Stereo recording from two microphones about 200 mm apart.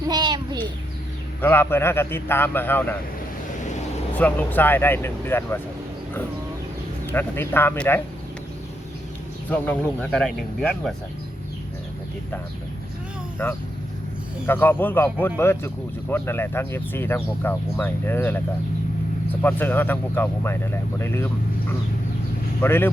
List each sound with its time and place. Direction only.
0.1 s a sound: 20° right (ahead or behind)
1.4 s speech: 10° left (ahead or behind)
4.2 s speech: 10° left (ahead or behind)
7.1 s speech: 10° left (ahead or behind)
9.5 s speech: 10° left (ahead or behind)
13.4 s speech: 10° left (ahead or behind)
22.6 s speech: 10° left (ahead or behind)